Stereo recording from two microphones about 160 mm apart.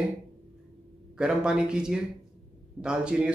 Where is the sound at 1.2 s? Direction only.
5° right (ahead or behind).